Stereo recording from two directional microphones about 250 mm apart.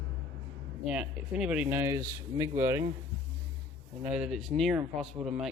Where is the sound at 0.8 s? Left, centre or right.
Centre.